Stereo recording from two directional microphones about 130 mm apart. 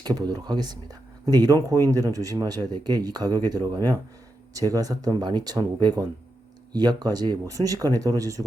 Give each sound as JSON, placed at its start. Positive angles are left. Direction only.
{"t": 0.2, "sound": "speech", "side_deg": -30}